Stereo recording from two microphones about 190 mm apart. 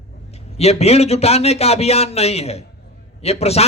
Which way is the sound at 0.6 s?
35° left (ahead or behind).